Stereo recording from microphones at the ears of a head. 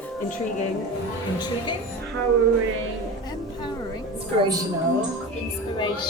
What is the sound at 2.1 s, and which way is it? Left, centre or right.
Music, right.